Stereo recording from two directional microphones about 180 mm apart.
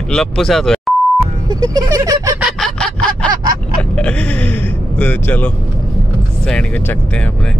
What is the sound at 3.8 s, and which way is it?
Speech, 5° left (ahead or behind).